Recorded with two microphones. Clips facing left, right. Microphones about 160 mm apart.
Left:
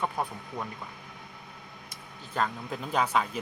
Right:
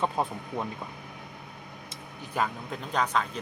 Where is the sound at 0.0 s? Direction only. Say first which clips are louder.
Right 3 dB; 20° right (ahead or behind).